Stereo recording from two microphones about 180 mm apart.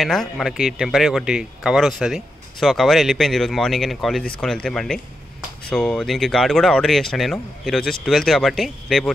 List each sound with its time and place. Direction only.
0.0 s speech: centre (ahead or behind)